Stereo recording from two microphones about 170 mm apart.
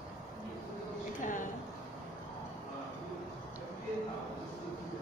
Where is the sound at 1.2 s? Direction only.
50° left (ahead or behind).